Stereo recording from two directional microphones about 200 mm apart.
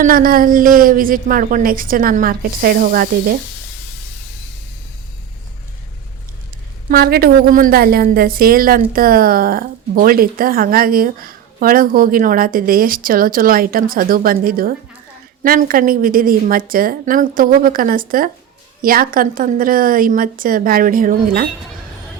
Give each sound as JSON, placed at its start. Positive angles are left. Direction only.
{"t": 0.0, "sound": "a woman's voice", "side_deg": -45}
{"t": 6.9, "sound": "a woman's voice", "side_deg": -50}